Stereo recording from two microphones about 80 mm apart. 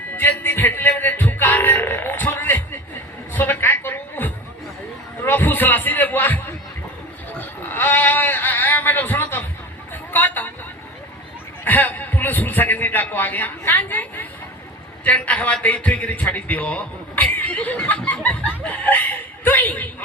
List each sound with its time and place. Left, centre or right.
0.1 s music: left
3.3 s a sound: left
9.9 s vehicle: left
11.6 s a man's voice: left